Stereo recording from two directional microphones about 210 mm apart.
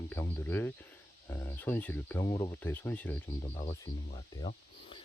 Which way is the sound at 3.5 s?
25° left (ahead or behind).